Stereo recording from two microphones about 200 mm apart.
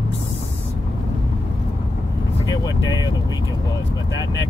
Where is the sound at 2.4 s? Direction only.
20° left (ahead or behind).